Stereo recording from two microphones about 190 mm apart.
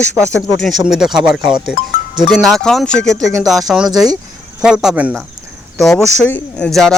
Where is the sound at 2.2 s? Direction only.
Centre (ahead or behind).